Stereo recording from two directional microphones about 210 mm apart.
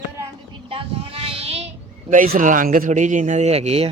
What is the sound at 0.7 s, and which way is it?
Child singing, 30° right (ahead or behind).